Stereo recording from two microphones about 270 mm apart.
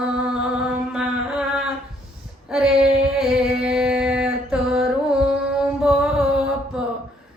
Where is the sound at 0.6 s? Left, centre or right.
Centre.